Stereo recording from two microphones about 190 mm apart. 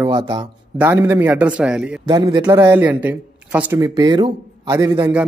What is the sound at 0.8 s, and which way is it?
Speech, 10° right (ahead or behind).